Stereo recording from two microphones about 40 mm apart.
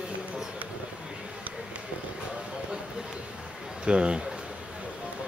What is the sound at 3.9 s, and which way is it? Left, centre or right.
Speech, right.